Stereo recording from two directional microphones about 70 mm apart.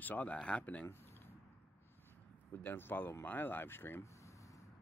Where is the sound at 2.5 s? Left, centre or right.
Left.